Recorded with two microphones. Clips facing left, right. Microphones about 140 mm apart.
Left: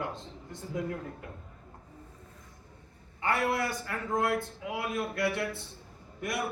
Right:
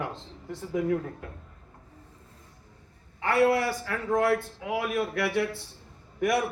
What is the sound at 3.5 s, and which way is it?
A man's voice, 85° right.